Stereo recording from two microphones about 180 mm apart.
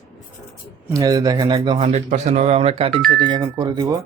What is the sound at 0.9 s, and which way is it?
A man's voice, 20° right (ahead or behind).